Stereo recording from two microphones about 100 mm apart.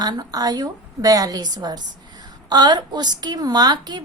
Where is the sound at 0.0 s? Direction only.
40° right (ahead or behind).